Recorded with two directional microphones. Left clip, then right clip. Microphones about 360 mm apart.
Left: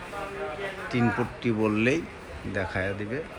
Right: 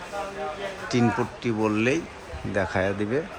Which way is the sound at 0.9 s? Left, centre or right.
Centre.